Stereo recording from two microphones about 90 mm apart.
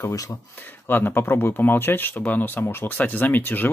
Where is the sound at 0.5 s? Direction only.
25° left (ahead or behind).